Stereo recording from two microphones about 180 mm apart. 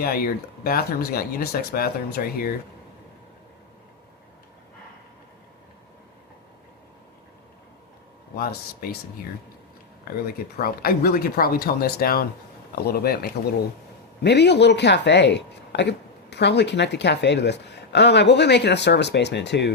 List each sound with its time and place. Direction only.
0.0 s speech: 60° left (ahead or behind)
8.4 s speech: 60° left (ahead or behind)
10.3 s speech: 55° left (ahead or behind)
14.3 s speech: 70° left (ahead or behind)